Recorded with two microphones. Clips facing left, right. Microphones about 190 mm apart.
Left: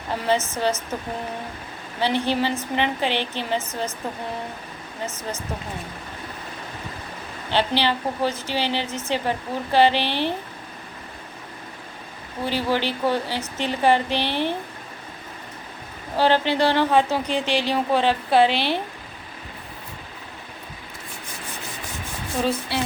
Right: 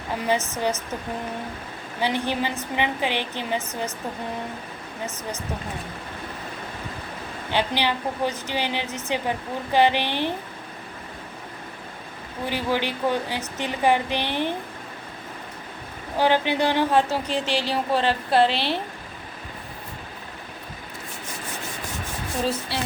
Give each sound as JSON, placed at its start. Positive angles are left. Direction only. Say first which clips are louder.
{"t": 0.3, "sound": "a woman's voice", "louder": "left 2 dB", "side_deg": -15}
{"t": 2.0, "sound": "a woman's voice", "louder": "left 3 dB", "side_deg": -15}
{"t": 7.5, "sound": "a woman's voice", "louder": "left 2 dB", "side_deg": -15}
{"t": 12.5, "sound": "a woman's voice", "louder": "left 2 dB", "side_deg": -15}
{"t": 16.1, "sound": "a woman's voice", "louder": "left 1 dB", "side_deg": -15}